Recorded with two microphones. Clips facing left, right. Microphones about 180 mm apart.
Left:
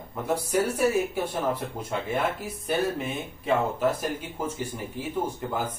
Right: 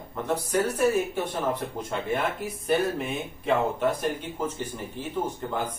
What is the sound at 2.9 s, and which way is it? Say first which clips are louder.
Speech: right 1 dB; centre (ahead or behind).